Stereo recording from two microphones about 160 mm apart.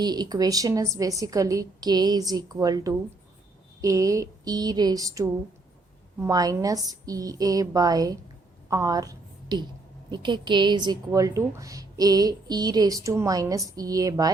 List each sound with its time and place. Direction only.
0.0 s a woman's voice: 25° right (ahead or behind)